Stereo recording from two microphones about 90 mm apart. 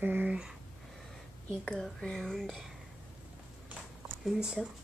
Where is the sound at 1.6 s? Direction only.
10° left (ahead or behind).